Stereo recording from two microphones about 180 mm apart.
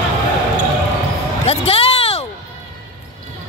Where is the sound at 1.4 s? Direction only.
35° left (ahead or behind).